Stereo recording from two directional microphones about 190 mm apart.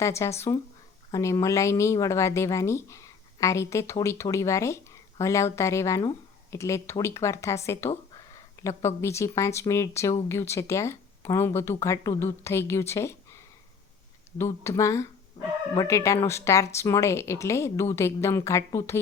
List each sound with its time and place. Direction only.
0.0 s speech: 15° left (ahead or behind)
8.6 s a sound: 15° left (ahead or behind)
9.0 s speech: 15° left (ahead or behind)
14.3 s speech: 15° left (ahead or behind)